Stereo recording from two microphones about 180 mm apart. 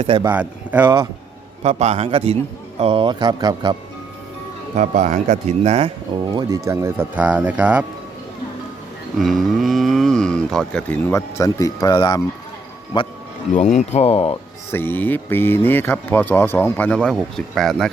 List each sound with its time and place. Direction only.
0.3 s speech: 10° right (ahead or behind)
1.6 s a man's voice: 40° right (ahead or behind)
4.8 s a man's voice: 45° right (ahead or behind)
6.3 s speech: 15° right (ahead or behind)
9.1 s speech: centre (ahead or behind); by 13.1 s 25° left (ahead or behind)
13.7 s speech: 35° left (ahead or behind)
14.7 s speech: 10° left (ahead or behind)